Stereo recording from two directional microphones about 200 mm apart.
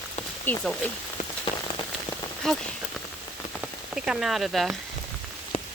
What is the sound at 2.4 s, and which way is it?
Speech, centre (ahead or behind).